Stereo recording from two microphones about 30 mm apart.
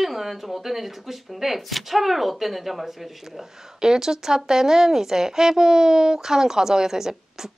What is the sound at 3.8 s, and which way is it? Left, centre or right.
Speech, right.